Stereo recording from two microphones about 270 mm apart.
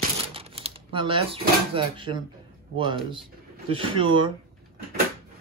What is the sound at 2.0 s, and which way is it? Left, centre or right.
Speech, centre.